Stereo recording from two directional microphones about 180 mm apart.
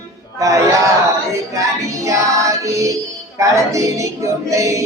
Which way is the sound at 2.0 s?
15° right (ahead or behind).